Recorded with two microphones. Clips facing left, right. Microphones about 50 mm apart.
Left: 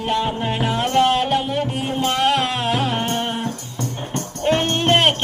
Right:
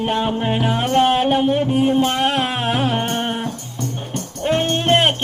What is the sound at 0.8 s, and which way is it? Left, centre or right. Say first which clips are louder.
Music: even; centre.